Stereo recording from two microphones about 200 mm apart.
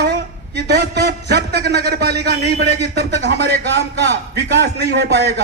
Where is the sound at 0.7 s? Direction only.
55° right (ahead or behind).